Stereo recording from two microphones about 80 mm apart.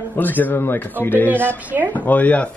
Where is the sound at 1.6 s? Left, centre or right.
Centre.